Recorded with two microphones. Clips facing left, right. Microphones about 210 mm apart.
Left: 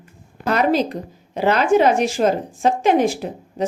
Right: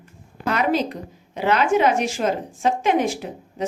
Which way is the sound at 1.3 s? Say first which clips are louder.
Left 3 dB; 35° left (ahead or behind).